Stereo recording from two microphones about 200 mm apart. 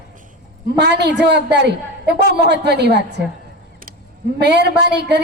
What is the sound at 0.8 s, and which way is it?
A woman's voice, 60° right (ahead or behind).